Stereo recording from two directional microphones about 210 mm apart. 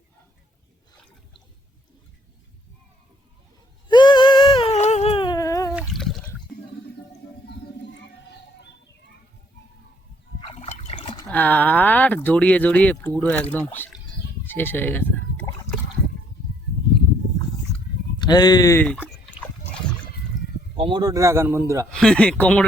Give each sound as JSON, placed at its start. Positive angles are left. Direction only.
{"t": 3.8, "sound": "a sound", "side_deg": 20}
{"t": 5.9, "sound": "a sound", "side_deg": 0}
{"t": 10.4, "sound": "water", "side_deg": 30}
{"t": 11.3, "sound": "speech", "side_deg": 10}
{"t": 14.4, "sound": "bleat", "side_deg": 10}
{"t": 18.2, "sound": "speech", "side_deg": 20}
{"t": 20.7, "sound": "speech", "side_deg": -25}
{"t": 21.8, "sound": "speech", "side_deg": 5}